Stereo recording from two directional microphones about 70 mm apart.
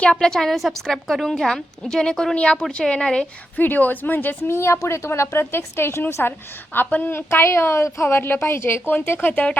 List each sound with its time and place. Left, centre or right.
0.0 s a woman's voice: centre
3.6 s speech: left
8.0 s speech: left